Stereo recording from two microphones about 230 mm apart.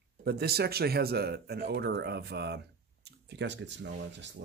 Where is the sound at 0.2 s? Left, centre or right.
Right.